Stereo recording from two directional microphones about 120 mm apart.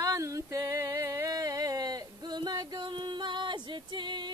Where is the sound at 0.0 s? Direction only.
30° right (ahead or behind).